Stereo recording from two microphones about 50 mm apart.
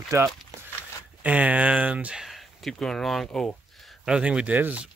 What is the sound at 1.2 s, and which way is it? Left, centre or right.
Speech, right.